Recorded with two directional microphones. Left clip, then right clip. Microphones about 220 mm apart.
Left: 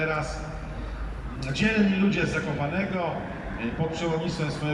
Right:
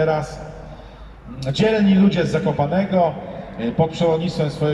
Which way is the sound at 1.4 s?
45° right (ahead or behind).